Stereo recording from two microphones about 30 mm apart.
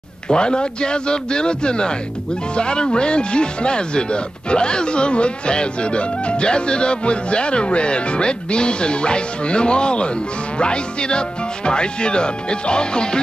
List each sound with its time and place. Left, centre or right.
0.3 s speech: left